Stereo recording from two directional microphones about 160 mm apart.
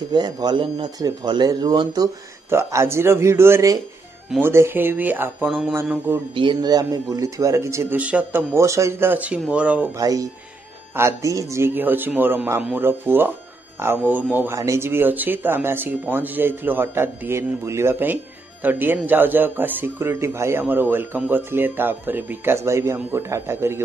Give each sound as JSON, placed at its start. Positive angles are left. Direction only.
{"t": 0.1, "sound": "speech", "side_deg": -25}
{"t": 6.3, "sound": "speech", "side_deg": -30}
{"t": 9.9, "sound": "speech", "side_deg": -20}